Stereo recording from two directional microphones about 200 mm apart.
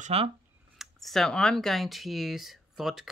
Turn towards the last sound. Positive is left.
turn(degrees=0)  # may be behind; listen again after turning